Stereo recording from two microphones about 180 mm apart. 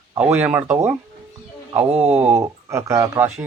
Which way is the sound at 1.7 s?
35° right (ahead or behind).